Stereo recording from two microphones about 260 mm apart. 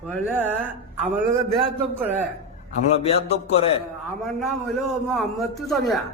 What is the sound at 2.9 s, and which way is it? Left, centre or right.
Speech, left.